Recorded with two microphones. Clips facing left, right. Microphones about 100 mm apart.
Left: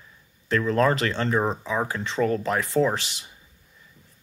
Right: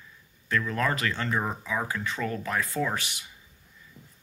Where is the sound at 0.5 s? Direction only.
30° left (ahead or behind).